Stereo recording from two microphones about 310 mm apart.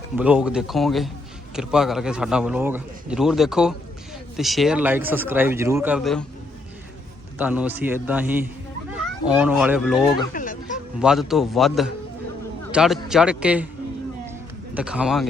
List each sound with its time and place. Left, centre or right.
0.2 s a man's voice: centre
7.3 s a man's voice: centre
10.3 s a sound: left
11.0 s a man's voice: centre
14.8 s a man's voice: centre